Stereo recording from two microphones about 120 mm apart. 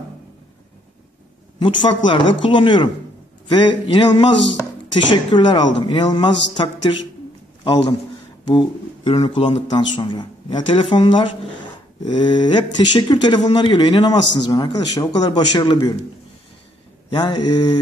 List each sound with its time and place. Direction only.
1.6 s a man's voice: 40° left (ahead or behind)
8.5 s a man's voice: 40° left (ahead or behind)
17.1 s speech: 35° left (ahead or behind)